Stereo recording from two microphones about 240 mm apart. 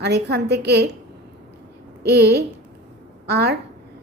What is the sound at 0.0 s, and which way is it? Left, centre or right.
Speech, right.